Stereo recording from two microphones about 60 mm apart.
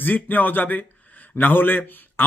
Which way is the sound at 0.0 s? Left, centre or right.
Left.